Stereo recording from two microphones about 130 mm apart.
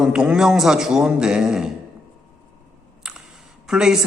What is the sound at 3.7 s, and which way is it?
Speech, 5° right (ahead or behind).